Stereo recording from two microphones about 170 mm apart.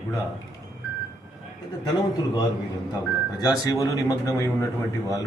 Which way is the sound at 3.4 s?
20° left (ahead or behind).